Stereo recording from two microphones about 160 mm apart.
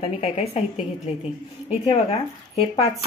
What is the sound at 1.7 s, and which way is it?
Speech, 40° left (ahead or behind).